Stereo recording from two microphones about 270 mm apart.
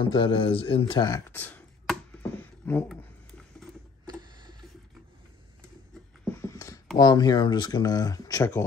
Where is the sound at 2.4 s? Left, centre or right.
Centre.